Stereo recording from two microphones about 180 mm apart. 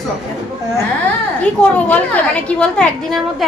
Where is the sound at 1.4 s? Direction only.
10° left (ahead or behind).